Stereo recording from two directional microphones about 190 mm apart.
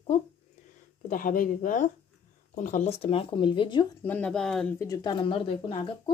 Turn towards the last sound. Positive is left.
turn(degrees=30)  # may be behind; listen again after turning